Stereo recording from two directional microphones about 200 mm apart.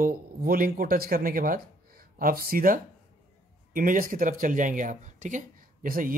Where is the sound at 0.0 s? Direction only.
45° right (ahead or behind).